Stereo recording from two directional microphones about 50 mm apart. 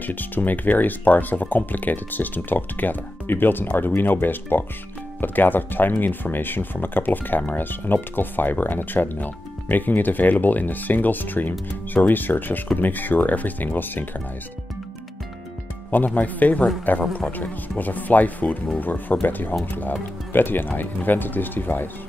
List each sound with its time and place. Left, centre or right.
0.0 s speech: left
16.2 s speech: left